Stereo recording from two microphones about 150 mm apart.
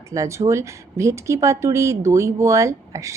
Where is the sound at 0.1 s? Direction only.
20° right (ahead or behind).